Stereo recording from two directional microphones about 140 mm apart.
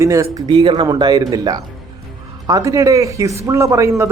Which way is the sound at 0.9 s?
30° right (ahead or behind).